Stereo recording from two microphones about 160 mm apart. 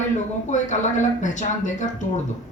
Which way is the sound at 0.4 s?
50° left (ahead or behind).